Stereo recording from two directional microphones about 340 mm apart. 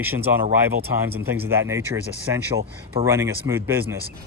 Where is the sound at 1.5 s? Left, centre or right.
Centre.